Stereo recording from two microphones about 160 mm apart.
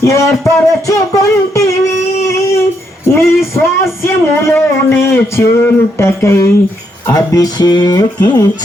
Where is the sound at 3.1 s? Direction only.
15° left (ahead or behind).